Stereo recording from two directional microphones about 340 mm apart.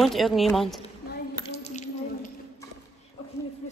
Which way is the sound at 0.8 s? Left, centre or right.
Centre.